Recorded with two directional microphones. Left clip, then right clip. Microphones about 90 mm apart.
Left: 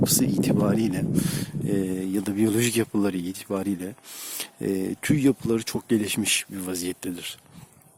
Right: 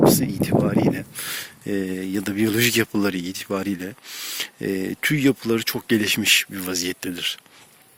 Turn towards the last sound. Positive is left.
turn(degrees=10)  # may be behind; listen again after turning